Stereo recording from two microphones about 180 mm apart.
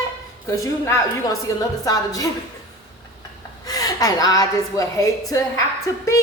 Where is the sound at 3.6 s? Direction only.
20° left (ahead or behind).